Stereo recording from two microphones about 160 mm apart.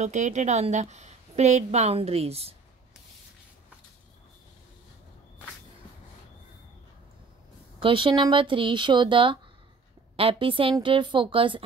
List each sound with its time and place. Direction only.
0.0 s a woman's voice: 45° right (ahead or behind)
7.8 s speech: 30° right (ahead or behind)